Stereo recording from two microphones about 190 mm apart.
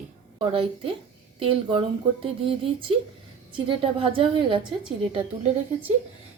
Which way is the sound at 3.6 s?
30° right (ahead or behind).